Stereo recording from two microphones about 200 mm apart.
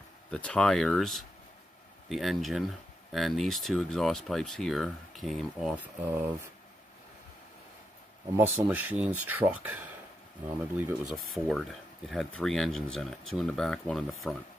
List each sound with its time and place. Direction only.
0.3 s speech: 5° left (ahead or behind)
8.4 s speech: 10° right (ahead or behind)
11.1 s speech: centre (ahead or behind)